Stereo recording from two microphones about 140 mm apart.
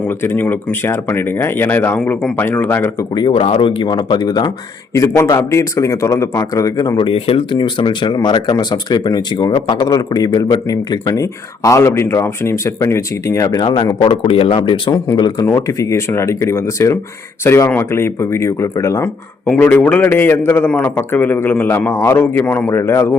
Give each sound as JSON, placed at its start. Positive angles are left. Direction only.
{"t": 0.0, "sound": "a man's voice", "side_deg": 15}
{"t": 3.2, "sound": "speech", "side_deg": 40}
{"t": 15.4, "sound": "a man's voice", "side_deg": 20}